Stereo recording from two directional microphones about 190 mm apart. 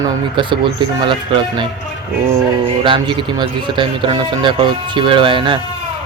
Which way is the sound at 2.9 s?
25° right (ahead or behind).